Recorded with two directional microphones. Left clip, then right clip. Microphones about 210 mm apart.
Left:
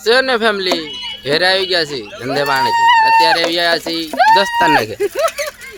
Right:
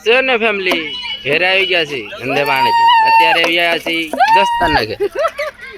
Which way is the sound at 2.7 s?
55° left (ahead or behind).